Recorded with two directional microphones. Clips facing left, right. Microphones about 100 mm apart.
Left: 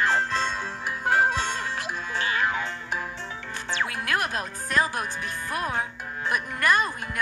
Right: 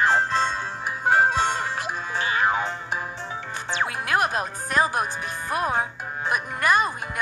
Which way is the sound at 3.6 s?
20° right (ahead or behind).